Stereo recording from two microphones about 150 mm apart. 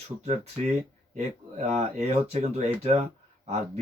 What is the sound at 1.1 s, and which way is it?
Speech, 50° right (ahead or behind).